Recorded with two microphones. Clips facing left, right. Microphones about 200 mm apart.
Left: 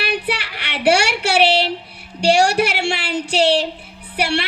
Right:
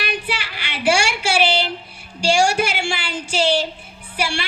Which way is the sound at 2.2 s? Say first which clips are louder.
Left 3 dB; 65° left (ahead or behind).